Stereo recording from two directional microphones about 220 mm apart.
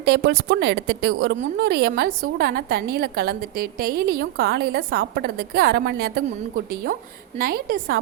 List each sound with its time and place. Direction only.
0.0 s a woman's voice: 50° right (ahead or behind)
6.9 s a woman's voice: 30° right (ahead or behind)
7.3 s a woman's voice: 40° right (ahead or behind)